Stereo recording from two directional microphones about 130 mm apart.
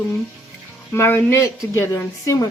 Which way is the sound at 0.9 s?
20° left (ahead or behind).